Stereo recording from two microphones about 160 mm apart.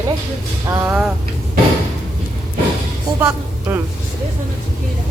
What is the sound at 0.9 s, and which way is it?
Speech, 5° right (ahead or behind).